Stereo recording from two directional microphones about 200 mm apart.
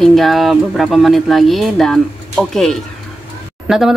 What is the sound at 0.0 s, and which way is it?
Speech, centre (ahead or behind).